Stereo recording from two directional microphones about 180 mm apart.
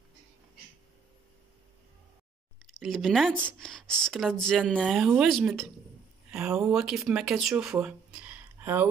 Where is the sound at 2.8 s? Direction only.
Centre (ahead or behind).